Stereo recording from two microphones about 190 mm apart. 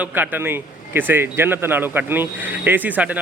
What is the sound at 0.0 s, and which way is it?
Speech, 10° right (ahead or behind).